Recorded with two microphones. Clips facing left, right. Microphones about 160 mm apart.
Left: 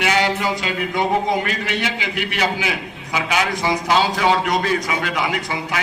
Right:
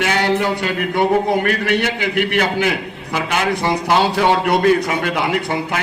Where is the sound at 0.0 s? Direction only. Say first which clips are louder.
Right 2 dB; 55° right (ahead or behind).